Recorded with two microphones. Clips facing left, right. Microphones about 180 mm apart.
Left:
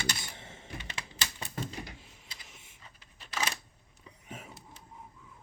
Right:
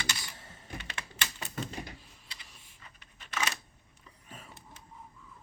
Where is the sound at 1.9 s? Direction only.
20° left (ahead or behind).